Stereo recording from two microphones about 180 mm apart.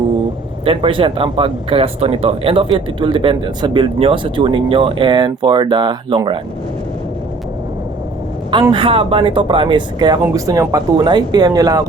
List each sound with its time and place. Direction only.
0.6 s speech: 30° right (ahead or behind)
8.7 s speech: 30° right (ahead or behind)